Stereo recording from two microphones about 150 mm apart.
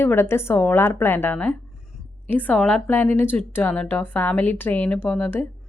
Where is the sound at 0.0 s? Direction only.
15° left (ahead or behind).